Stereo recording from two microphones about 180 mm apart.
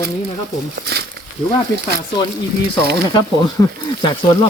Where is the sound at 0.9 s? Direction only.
60° right (ahead or behind).